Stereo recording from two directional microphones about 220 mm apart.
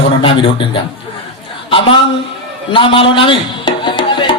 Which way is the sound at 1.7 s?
25° left (ahead or behind).